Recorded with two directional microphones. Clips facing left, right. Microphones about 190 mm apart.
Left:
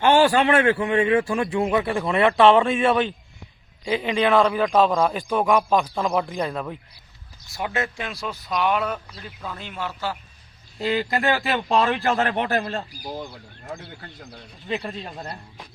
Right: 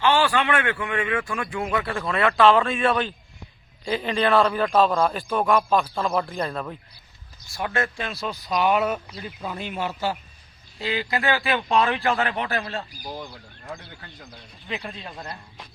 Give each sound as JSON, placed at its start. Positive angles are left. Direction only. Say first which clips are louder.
{"t": 0.0, "sound": "a man's voice", "louder": "left 4 dB", "side_deg": 45}
{"t": 3.8, "sound": "speech", "louder": "left 2 dB", "side_deg": 10}
{"t": 4.6, "sound": "speech", "louder": "left 1 dB", "side_deg": 15}
{"t": 7.5, "sound": "speech", "louder": "even", "side_deg": 20}
{"t": 8.4, "sound": "a man's voice", "louder": "right 2 dB", "side_deg": 0}
{"t": 10.8, "sound": "speech", "louder": "left 4 dB", "side_deg": 45}
{"t": 14.8, "sound": "a man's voice", "louder": "left 3 dB", "side_deg": 30}